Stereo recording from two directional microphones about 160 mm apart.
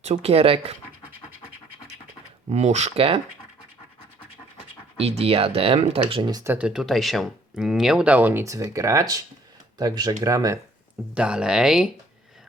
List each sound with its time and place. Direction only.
0.0 s speech: 40° right (ahead or behind)
2.5 s speech: 45° right (ahead or behind)
4.9 s speech: 40° right (ahead or behind)
6.4 s speech: 10° right (ahead or behind)
11.1 s speech: 5° right (ahead or behind)